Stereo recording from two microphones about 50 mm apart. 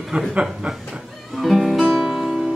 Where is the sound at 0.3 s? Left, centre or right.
Centre.